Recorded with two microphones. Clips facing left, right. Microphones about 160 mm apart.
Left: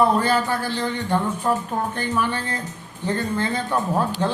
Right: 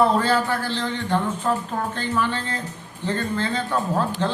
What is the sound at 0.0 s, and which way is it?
Speech, 15° left (ahead or behind).